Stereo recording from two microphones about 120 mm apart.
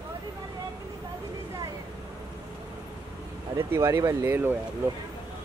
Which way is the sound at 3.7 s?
20° right (ahead or behind).